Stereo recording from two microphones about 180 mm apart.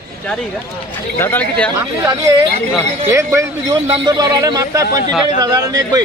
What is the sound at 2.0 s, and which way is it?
Speech, 20° right (ahead or behind).